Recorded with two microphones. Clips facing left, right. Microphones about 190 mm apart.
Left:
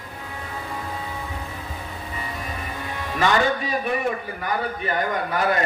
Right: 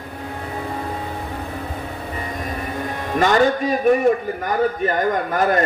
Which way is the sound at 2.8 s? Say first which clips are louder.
Right 5 dB; 50° right (ahead or behind).